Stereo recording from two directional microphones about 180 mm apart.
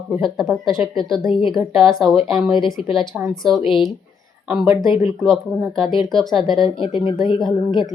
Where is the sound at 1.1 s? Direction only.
25° left (ahead or behind).